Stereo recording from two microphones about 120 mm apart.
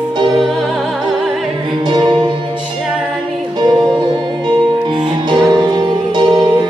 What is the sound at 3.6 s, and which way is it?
Music, 35° right (ahead or behind).